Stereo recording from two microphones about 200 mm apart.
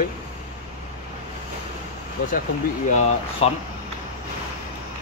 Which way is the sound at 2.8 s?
35° left (ahead or behind).